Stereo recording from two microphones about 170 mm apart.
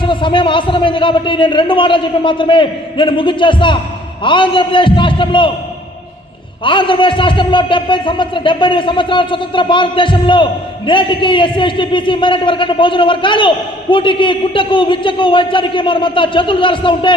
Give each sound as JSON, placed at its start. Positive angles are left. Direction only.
{"t": 0.0, "sound": "a man's voice", "side_deg": 30}
{"t": 6.7, "sound": "a man's voice", "side_deg": 30}